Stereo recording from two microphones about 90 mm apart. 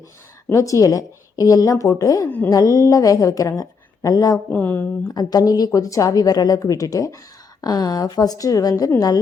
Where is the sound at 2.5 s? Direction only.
40° left (ahead or behind).